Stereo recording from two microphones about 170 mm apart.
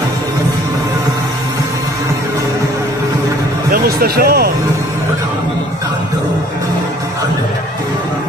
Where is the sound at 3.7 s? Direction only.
65° right (ahead or behind).